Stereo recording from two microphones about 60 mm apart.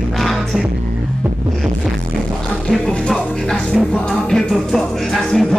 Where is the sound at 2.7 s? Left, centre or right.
Centre.